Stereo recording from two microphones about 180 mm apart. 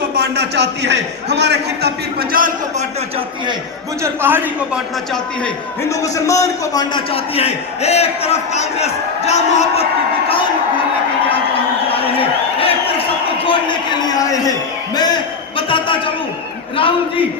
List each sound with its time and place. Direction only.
0.2 s a man's voice: 70° right (ahead or behind)
2.3 s a man's voice: 50° right (ahead or behind)
4.0 s a man's voice: 10° right (ahead or behind)
5.9 s a man's voice: 20° left (ahead or behind); by 9.8 s 40° left (ahead or behind)
11.9 s a sound: 30° left (ahead or behind)
14.2 s a man's voice: 20° left (ahead or behind)
14.9 s a sound: 25° left (ahead or behind)
16.7 s a man's voice: 30° left (ahead or behind)